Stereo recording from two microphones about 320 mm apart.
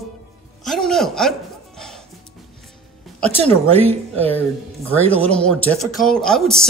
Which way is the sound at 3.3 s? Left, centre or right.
Centre.